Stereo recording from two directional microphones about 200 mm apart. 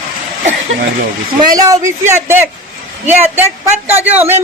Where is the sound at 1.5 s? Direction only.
15° right (ahead or behind).